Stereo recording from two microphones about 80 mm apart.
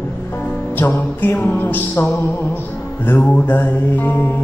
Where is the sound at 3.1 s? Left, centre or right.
Left.